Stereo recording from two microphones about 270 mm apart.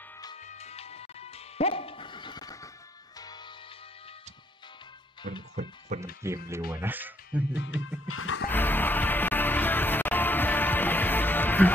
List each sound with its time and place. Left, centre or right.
0.4 s music: left
5.2 s music: right
5.9 s speech: right
6.7 s speech: centre
7.5 s music: left
8.5 s music: centre